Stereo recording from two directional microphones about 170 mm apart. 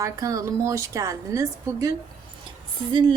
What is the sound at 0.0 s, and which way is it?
A woman's voice, 20° right (ahead or behind).